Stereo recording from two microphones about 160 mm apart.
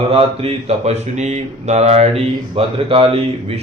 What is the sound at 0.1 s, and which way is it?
Speech, 40° right (ahead or behind).